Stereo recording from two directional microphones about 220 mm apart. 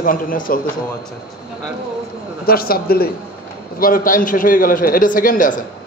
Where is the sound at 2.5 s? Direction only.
45° left (ahead or behind).